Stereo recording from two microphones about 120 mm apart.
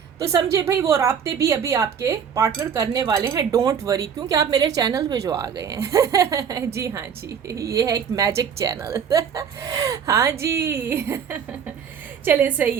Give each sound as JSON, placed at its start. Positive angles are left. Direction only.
{"t": 0.2, "sound": "a woman's voice", "side_deg": -30}